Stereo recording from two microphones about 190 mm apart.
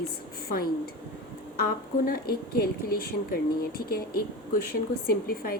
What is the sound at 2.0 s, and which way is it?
Speech, 55° left (ahead or behind).